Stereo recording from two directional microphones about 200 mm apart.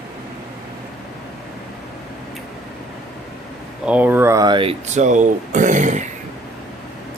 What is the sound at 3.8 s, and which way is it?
Speech, 10° right (ahead or behind).